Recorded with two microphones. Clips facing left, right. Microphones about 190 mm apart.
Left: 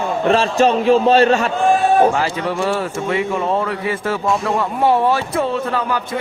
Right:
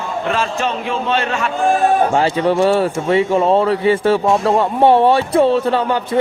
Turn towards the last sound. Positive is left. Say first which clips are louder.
# right 5 dB
turn(degrees=-30)  # may be behind; listen again after turning